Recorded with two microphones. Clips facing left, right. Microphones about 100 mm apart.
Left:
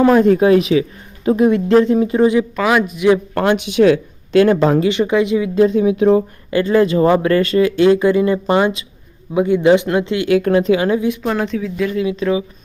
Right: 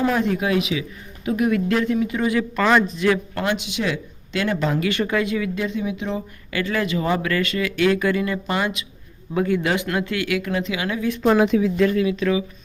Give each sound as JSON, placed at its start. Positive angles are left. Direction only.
{"t": 0.1, "sound": "speech", "side_deg": 45}
{"t": 2.6, "sound": "a man's voice", "side_deg": 5}
{"t": 3.3, "sound": "speech", "side_deg": 50}
{"t": 4.8, "sound": "speech", "side_deg": 20}
{"t": 5.5, "sound": "speech", "side_deg": 40}
{"t": 6.5, "sound": "speech", "side_deg": 30}
{"t": 9.3, "sound": "speech", "side_deg": 20}
{"t": 10.3, "sound": "speech", "side_deg": 45}
{"t": 11.2, "sound": "speech", "side_deg": -5}
{"t": 11.9, "sound": "speech", "side_deg": 25}